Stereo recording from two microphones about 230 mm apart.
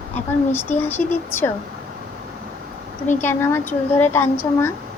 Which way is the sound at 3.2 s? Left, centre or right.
Centre.